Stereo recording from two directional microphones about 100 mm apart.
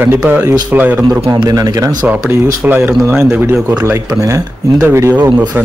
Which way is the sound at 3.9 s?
30° right (ahead or behind).